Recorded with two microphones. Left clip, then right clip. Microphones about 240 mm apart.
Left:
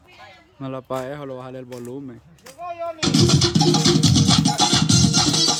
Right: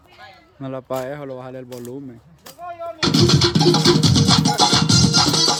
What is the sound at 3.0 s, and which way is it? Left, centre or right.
Music, centre.